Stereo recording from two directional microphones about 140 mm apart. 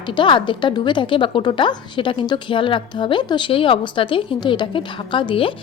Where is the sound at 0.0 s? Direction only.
35° left (ahead or behind).